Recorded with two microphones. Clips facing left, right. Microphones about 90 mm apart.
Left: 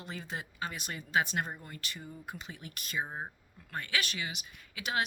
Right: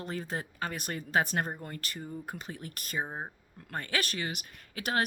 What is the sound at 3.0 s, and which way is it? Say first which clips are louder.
Speech: right 2 dB; 15° right (ahead or behind).